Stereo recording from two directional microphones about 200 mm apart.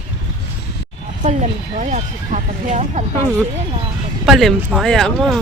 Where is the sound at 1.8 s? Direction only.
35° right (ahead or behind).